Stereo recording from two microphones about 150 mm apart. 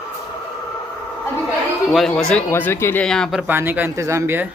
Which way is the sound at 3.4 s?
15° right (ahead or behind).